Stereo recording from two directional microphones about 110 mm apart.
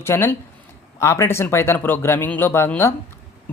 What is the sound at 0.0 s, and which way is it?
Speech, 20° left (ahead or behind).